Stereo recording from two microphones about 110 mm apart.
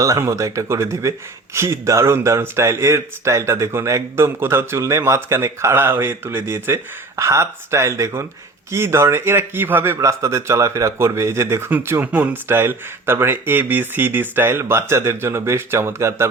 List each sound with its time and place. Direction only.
0.0 s a man's voice: 30° right (ahead or behind)